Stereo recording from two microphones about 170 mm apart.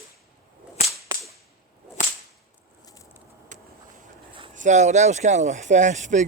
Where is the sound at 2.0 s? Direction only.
45° left (ahead or behind).